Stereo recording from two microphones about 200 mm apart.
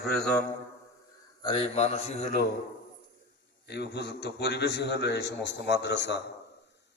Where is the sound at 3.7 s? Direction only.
55° left (ahead or behind).